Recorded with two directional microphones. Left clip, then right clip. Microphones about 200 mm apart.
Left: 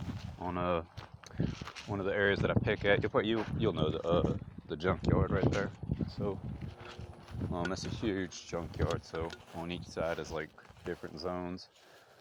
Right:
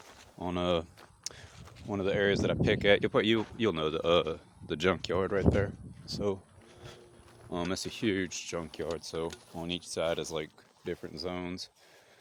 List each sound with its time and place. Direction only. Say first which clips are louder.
0.3 s a sound: right 3 dB; 50° right (ahead or behind)
1.5 s a sound: left 8 dB; 40° left (ahead or behind)
1.9 s speech: right 2 dB; 50° right (ahead or behind)
5.2 s speech: right 4 dB; 60° right (ahead or behind)
7.5 s speech: right 3 dB; 40° right (ahead or behind)
11.1 s speech: right 1 dB; 30° right (ahead or behind)